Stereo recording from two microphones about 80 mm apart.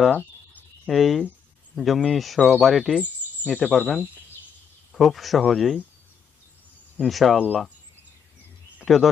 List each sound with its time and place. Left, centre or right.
0.8 s speech: centre
7.0 s speech: centre
8.8 s speech: centre